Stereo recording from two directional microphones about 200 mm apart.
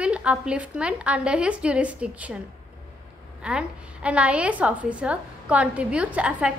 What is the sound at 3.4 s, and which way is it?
A woman's voice, 5° right (ahead or behind).